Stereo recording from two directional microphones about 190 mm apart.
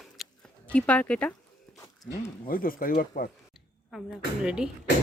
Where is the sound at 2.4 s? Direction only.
50° left (ahead or behind).